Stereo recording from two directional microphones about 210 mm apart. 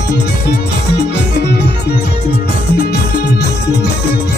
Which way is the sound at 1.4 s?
50° left (ahead or behind).